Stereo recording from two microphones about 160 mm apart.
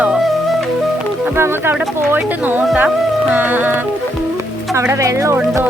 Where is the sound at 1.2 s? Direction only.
15° right (ahead or behind).